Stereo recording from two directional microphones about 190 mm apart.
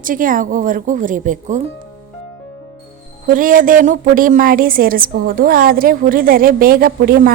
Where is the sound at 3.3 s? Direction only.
45° right (ahead or behind).